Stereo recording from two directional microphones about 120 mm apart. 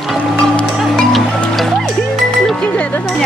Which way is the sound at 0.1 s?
Centre (ahead or behind).